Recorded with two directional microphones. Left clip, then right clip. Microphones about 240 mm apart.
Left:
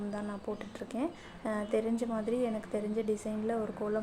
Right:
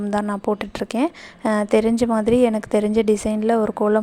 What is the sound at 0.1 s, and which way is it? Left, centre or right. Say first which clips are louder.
A woman's voice: right 17 dB; right.